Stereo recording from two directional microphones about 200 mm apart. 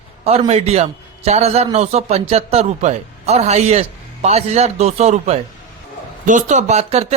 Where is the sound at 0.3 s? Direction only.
30° right (ahead or behind).